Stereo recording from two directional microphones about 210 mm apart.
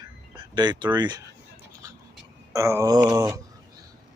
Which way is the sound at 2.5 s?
15° right (ahead or behind).